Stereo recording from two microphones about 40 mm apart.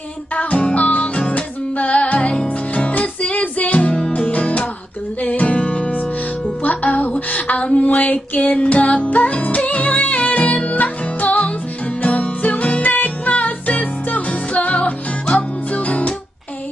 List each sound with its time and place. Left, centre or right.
0.4 s music: left
6.6 s a sound: left
12.0 s music: left